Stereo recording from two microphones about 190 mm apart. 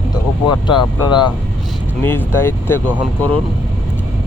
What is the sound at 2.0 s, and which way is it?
Speech, 10° left (ahead or behind).